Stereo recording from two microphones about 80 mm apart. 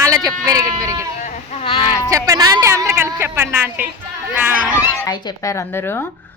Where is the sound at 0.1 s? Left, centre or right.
Right.